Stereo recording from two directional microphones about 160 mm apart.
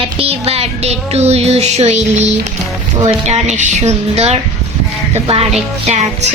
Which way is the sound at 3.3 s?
45° right (ahead or behind).